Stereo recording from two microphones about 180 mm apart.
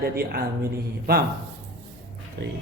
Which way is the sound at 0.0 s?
60° right (ahead or behind).